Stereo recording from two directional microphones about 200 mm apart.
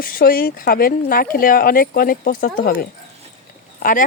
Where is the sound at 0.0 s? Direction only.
45° left (ahead or behind).